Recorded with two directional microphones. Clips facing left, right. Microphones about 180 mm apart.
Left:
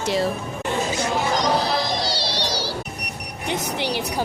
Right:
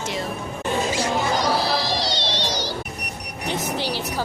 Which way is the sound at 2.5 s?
30° left (ahead or behind).